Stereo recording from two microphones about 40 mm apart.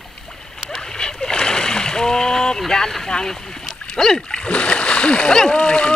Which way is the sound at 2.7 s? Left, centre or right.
Centre.